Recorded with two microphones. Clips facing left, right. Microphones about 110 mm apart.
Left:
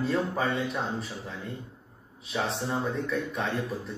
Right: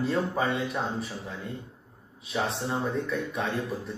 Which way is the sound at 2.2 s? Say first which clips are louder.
Right 1 dB; centre (ahead or behind).